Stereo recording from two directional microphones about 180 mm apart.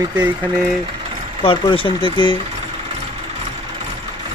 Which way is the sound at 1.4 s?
30° left (ahead or behind).